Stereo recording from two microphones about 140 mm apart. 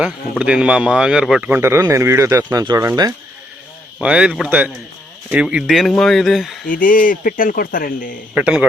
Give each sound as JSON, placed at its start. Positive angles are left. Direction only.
{"t": 0.0, "sound": "speech", "side_deg": -5}
{"t": 1.5, "sound": "speech", "side_deg": -15}
{"t": 4.0, "sound": "speech", "side_deg": -5}
{"t": 6.7, "sound": "speech", "side_deg": 75}
{"t": 8.4, "sound": "speech", "side_deg": -5}